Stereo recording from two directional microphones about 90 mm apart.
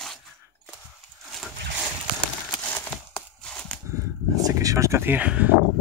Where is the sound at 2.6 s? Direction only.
20° left (ahead or behind).